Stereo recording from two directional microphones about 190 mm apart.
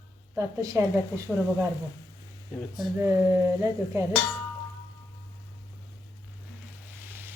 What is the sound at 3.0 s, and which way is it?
Speech, 15° right (ahead or behind).